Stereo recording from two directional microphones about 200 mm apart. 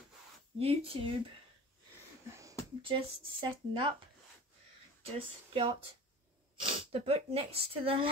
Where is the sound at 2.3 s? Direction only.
15° right (ahead or behind).